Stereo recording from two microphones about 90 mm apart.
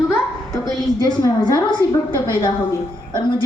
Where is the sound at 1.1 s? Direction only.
50° left (ahead or behind).